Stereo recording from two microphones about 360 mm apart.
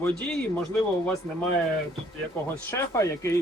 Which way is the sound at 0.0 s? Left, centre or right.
Centre.